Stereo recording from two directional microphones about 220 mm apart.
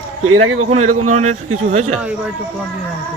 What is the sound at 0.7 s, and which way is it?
Speech, 30° right (ahead or behind).